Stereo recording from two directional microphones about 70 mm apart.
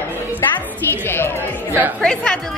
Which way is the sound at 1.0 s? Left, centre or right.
Left.